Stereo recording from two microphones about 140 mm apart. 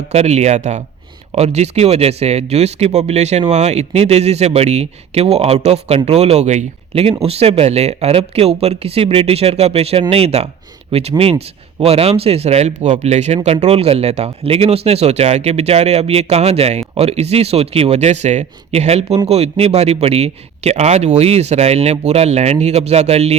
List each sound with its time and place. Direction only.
0.1 s speech: 50° right (ahead or behind)